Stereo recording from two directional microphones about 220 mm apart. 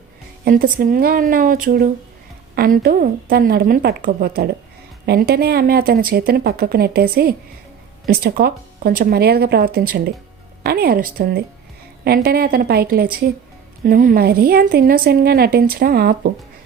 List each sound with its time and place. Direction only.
0.4 s a woman's voice: 40° right (ahead or behind)